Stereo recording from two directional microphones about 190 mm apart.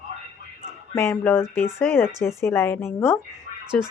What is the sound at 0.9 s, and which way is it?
A woman's voice, 15° left (ahead or behind).